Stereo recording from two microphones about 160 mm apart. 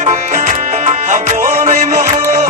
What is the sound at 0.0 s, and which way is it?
Music, 45° right (ahead or behind).